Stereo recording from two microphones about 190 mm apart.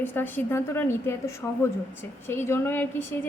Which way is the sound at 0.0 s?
10° left (ahead or behind).